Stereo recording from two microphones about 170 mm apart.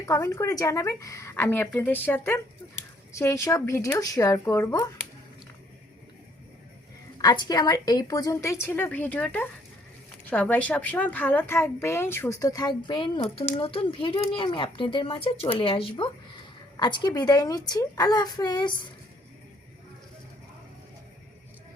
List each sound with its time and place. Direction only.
0.0 s a woman's voice: 20° left (ahead or behind)
7.2 s a woman's voice: 25° left (ahead or behind)